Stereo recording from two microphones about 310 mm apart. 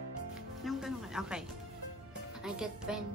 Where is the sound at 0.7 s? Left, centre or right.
Centre.